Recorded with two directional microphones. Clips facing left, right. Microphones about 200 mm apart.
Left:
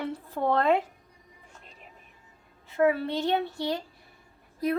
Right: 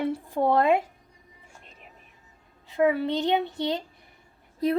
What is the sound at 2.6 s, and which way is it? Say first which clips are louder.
A woman's voice: right 1 dB; 15° right (ahead or behind).